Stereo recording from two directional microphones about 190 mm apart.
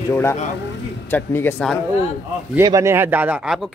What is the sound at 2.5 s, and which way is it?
Speech, 15° right (ahead or behind).